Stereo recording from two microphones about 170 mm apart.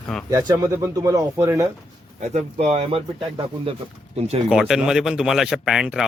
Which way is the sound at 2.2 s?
40° right (ahead or behind).